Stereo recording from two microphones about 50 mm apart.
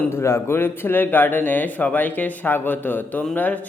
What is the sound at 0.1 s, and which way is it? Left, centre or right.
Speech, left.